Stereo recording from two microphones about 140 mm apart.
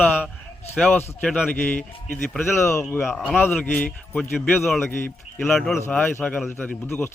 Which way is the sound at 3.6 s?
10° left (ahead or behind).